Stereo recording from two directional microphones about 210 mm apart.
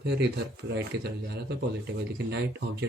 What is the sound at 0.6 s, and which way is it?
Speech, 50° right (ahead or behind).